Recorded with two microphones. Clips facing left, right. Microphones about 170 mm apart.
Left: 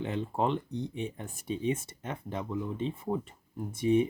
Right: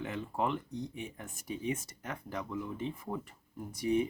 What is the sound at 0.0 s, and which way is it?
Speech, 30° left (ahead or behind).